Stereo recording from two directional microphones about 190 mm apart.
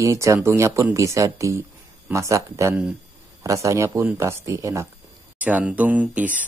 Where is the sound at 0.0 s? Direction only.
15° right (ahead or behind).